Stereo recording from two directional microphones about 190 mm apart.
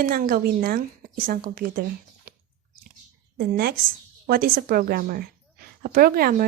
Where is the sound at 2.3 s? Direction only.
45° right (ahead or behind).